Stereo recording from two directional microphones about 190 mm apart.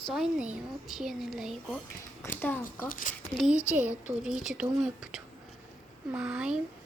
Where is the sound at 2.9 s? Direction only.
45° left (ahead or behind).